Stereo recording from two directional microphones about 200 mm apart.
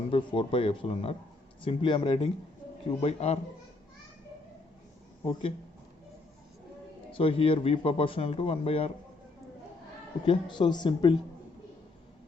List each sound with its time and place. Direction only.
0.1 s a man's voice: 25° left (ahead or behind)
5.2 s a man's voice: 25° left (ahead or behind)
7.1 s a man's voice: 25° left (ahead or behind)
10.2 s a man's voice: 20° left (ahead or behind)